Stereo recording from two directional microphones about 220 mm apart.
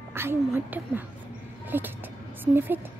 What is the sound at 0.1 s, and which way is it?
Speech, 10° right (ahead or behind).